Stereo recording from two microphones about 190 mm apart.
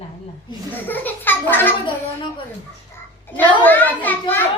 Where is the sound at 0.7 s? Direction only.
10° left (ahead or behind).